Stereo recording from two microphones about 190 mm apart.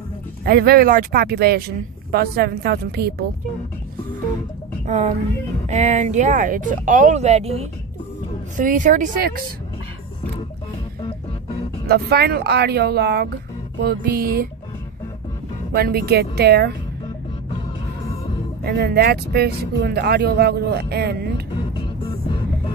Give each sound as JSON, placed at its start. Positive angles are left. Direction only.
{"t": 0.5, "sound": "speech", "side_deg": -55}
{"t": 4.8, "sound": "speech", "side_deg": -35}
{"t": 8.5, "sound": "music", "side_deg": -45}
{"t": 11.9, "sound": "speech", "side_deg": -55}
{"t": 13.7, "sound": "music", "side_deg": -55}
{"t": 15.7, "sound": "speech", "side_deg": -55}
{"t": 18.6, "sound": "speech", "side_deg": -55}